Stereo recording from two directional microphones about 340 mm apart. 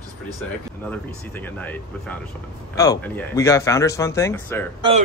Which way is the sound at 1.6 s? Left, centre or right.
Centre.